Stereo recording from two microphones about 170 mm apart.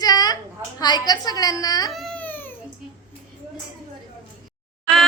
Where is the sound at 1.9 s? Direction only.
5° left (ahead or behind).